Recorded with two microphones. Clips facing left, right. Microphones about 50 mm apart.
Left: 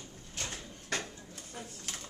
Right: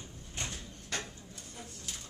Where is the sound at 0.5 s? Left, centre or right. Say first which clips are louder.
Left 2 dB; left.